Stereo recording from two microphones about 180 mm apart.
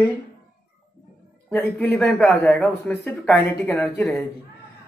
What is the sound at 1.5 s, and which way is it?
Speech, 10° left (ahead or behind).